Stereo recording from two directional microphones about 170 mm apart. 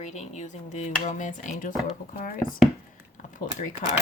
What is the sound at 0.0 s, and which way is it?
Speech, 45° left (ahead or behind).